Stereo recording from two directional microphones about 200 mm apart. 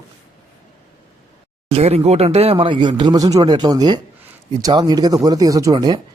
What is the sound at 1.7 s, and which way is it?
Speech, 30° right (ahead or behind).